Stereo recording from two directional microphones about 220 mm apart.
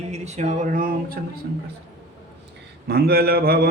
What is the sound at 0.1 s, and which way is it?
Speech, 30° right (ahead or behind).